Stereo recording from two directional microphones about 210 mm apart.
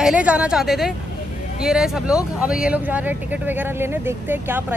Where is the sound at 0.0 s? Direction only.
5° right (ahead or behind).